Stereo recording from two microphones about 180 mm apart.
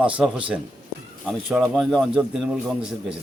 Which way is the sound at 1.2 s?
Centre (ahead or behind).